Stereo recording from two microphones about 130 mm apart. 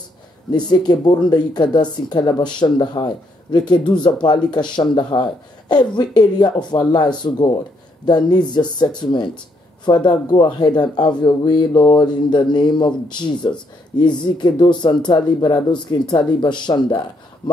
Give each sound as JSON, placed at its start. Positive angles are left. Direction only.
{"t": 0.5, "sound": "speech", "side_deg": 30}